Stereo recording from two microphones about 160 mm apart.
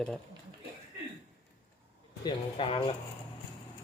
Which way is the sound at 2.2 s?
35° left (ahead or behind).